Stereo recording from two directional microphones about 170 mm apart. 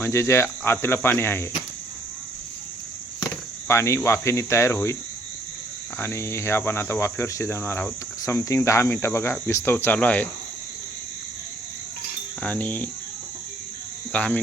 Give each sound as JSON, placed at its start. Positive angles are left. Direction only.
{"t": 0.0, "sound": "speech", "side_deg": 15}
{"t": 3.7, "sound": "speech", "side_deg": 15}
{"t": 6.0, "sound": "speech", "side_deg": 15}
{"t": 12.4, "sound": "speech", "side_deg": 10}
{"t": 14.1, "sound": "speech", "side_deg": 10}